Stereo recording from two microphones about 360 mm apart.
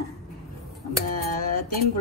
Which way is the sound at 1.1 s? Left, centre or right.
Left.